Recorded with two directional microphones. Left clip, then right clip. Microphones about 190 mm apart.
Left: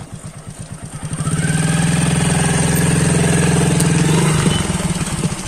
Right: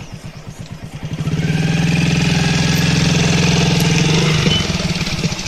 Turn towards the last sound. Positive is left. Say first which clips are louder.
# right 2 dB
turn(degrees=35)  # may be behind; listen again after turning